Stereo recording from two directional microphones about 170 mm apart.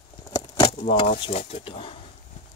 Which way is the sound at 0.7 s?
40° left (ahead or behind).